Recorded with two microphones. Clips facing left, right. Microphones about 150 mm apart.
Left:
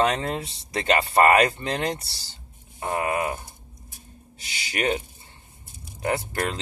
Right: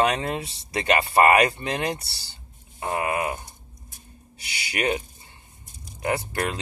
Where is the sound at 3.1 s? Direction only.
30° left (ahead or behind).